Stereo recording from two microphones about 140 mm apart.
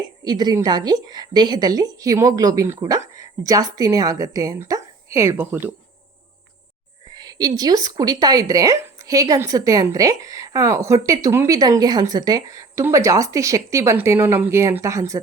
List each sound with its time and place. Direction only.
0.3 s a woman's voice: 30° right (ahead or behind); by 5.7 s 15° right (ahead or behind)
7.1 s a woman's voice: 30° right (ahead or behind)